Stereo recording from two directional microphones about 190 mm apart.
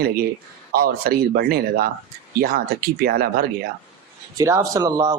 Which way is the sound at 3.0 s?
50° right (ahead or behind).